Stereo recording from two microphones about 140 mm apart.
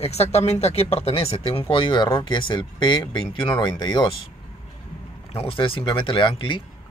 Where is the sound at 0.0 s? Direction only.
50° left (ahead or behind); by 4.1 s 35° left (ahead or behind).